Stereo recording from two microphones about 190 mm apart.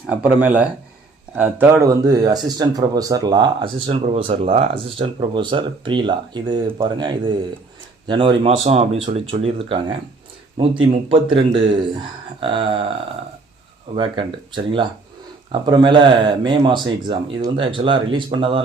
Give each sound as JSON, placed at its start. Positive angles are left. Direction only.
{"t": 0.1, "sound": "speech", "side_deg": -5}
{"t": 11.1, "sound": "speech", "side_deg": -25}
{"t": 13.9, "sound": "speech", "side_deg": -25}